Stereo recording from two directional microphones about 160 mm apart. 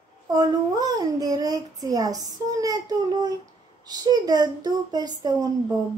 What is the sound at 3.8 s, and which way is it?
Child singing, 25° right (ahead or behind).